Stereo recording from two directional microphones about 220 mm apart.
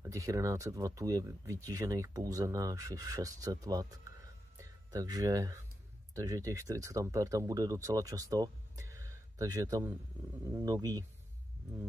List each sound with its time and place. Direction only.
0.0 s speech: 15° right (ahead or behind)